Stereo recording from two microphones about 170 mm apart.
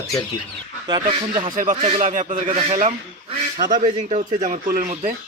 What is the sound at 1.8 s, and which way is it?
Speech, 40° right (ahead or behind).